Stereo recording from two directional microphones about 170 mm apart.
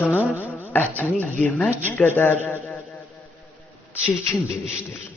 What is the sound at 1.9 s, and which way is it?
Speech, 10° left (ahead or behind).